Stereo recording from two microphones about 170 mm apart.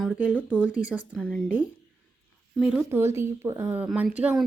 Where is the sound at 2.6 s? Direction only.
5° right (ahead or behind).